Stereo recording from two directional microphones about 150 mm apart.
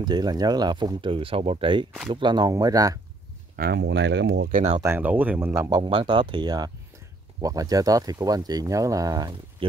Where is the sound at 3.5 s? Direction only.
90° right.